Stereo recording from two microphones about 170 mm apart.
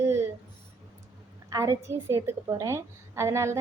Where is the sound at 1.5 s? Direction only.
20° right (ahead or behind).